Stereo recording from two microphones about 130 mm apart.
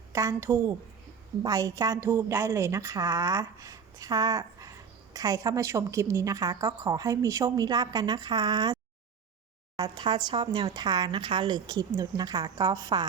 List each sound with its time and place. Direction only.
0.1 s a woman's voice: 20° right (ahead or behind)